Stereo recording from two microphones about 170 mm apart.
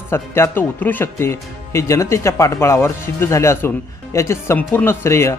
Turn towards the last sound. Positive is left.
turn(degrees=15)  # may be behind; listen again after turning